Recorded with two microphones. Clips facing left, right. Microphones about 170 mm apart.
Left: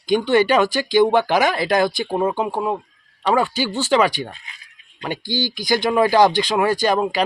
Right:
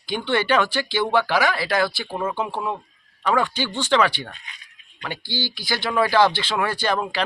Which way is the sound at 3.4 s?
10° left (ahead or behind).